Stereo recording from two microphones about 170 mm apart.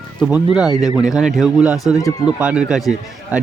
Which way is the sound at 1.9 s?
20° left (ahead or behind).